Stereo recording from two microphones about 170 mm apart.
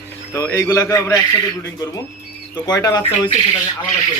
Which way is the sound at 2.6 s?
25° left (ahead or behind).